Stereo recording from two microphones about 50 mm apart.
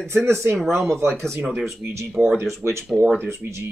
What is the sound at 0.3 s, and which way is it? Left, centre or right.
Speech, right.